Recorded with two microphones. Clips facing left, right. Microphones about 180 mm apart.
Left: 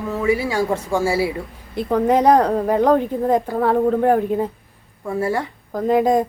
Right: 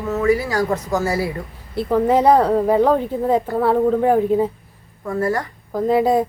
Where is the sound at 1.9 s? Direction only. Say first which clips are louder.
Even; 5° right (ahead or behind).